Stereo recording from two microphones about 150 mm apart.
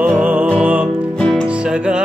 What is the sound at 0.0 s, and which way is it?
Music, 10° right (ahead or behind).